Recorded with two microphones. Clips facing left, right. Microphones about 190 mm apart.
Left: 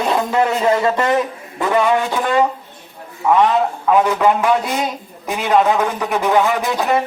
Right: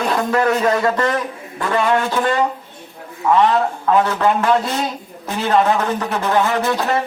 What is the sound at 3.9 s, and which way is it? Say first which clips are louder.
Speech: left 2 dB; 10° left (ahead or behind).